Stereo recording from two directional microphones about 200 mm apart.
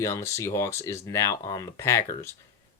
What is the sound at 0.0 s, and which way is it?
Speech, 15° left (ahead or behind).